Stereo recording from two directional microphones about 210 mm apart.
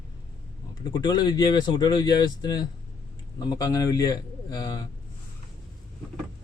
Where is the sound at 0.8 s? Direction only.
20° left (ahead or behind).